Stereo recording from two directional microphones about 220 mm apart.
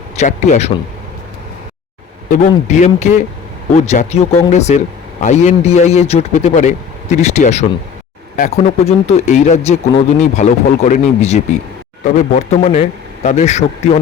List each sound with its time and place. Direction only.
0.2 s speech: 30° left (ahead or behind)
2.3 s speech: 35° left (ahead or behind)